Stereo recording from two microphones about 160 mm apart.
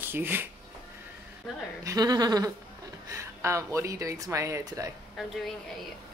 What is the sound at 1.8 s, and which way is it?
Speech, 25° right (ahead or behind).